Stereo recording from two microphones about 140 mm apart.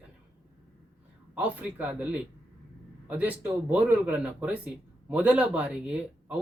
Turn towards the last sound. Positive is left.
turn(degrees=-5)  # may be behind; listen again after turning